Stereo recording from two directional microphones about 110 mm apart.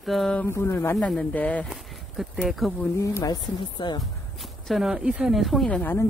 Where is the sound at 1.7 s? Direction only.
Centre (ahead or behind).